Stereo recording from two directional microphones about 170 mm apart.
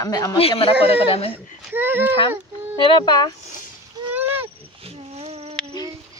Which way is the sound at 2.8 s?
30° left (ahead or behind).